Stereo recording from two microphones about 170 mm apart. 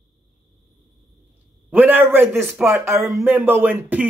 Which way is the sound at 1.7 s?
10° right (ahead or behind).